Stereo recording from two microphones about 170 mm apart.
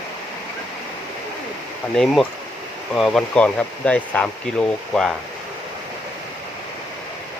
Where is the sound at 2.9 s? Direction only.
Centre (ahead or behind).